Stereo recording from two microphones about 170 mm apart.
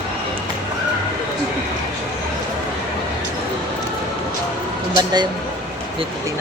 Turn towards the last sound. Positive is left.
turn(degrees=-25)  # may be behind; listen again after turning